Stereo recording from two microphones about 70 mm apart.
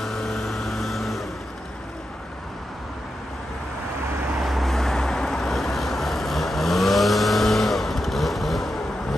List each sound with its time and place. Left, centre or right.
0.0 s vehicle: centre
4.4 s vehicle: centre